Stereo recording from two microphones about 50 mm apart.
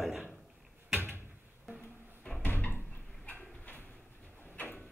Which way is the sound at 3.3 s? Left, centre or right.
Left.